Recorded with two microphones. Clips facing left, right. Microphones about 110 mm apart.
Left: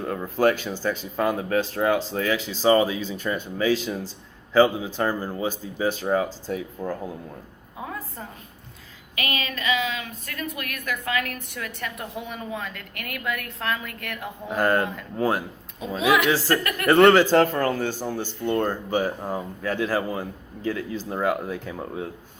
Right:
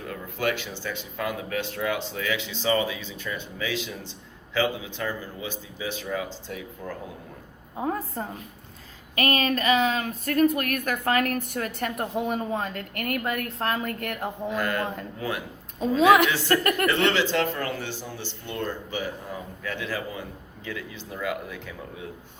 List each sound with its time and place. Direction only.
0.3 s speech: 40° left (ahead or behind)
7.8 s a woman's voice: 40° right (ahead or behind)
14.5 s speech: 40° left (ahead or behind)
15.8 s a woman's voice: 40° right (ahead or behind)
16.3 s speech: 35° left (ahead or behind)
16.8 s a man's voice: 45° left (ahead or behind)